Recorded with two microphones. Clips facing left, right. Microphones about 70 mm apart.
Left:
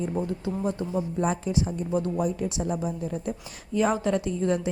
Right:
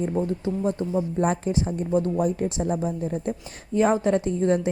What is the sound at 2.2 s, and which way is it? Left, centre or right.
A woman's voice, right.